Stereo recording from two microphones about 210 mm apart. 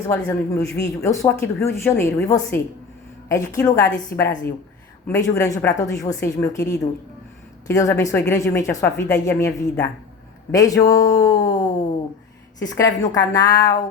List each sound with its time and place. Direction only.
0.3 s speech: 10° left (ahead or behind)
5.0 s speech: 15° left (ahead or behind)